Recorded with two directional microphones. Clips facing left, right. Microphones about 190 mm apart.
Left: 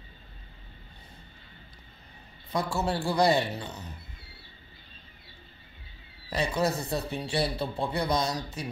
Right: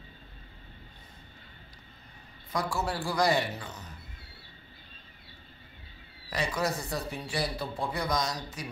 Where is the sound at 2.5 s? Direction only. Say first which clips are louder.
Left 3 dB; 25° left (ahead or behind).